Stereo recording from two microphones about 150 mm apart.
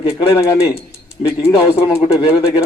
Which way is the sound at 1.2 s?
50° left (ahead or behind).